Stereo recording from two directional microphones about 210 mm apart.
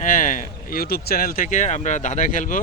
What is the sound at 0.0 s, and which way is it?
Speech, 40° left (ahead or behind).